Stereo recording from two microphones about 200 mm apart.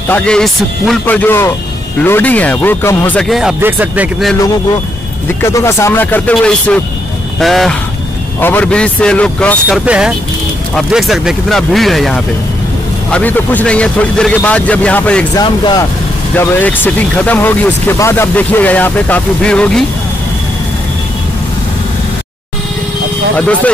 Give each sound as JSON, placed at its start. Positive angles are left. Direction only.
{"t": 0.1, "sound": "speech", "side_deg": 5}
{"t": 5.4, "sound": "speech", "side_deg": 15}
{"t": 9.8, "sound": "speech", "side_deg": -5}
{"t": 15.3, "sound": "speech", "side_deg": 20}
{"t": 16.3, "sound": "speech", "side_deg": 10}
{"t": 23.3, "sound": "speech", "side_deg": 5}